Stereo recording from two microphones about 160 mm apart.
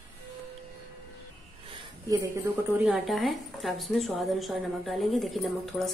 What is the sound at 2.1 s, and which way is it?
Speech, 20° right (ahead or behind).